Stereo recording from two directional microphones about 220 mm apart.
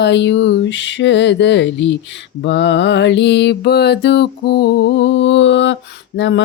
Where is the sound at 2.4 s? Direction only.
55° left (ahead or behind).